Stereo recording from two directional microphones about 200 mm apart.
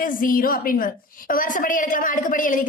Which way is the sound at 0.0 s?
45° left (ahead or behind).